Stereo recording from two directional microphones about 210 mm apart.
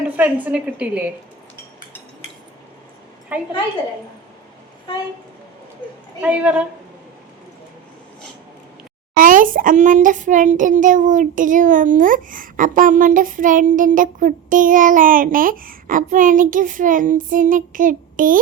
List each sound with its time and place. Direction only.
0.2 s a woman's voice: 5° right (ahead or behind)
3.3 s a woman's voice: 10° right (ahead or behind)
6.2 s a woman's voice: 5° right (ahead or behind)
9.1 s a child's voice: 40° right (ahead or behind)